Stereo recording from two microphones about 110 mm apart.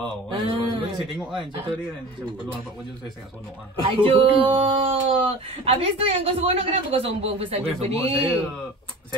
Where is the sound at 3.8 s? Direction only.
55° right (ahead or behind).